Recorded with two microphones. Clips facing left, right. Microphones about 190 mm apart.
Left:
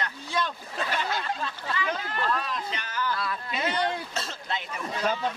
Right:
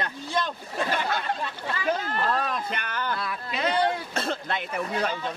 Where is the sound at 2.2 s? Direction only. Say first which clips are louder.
Right 3 dB; 45° right (ahead or behind).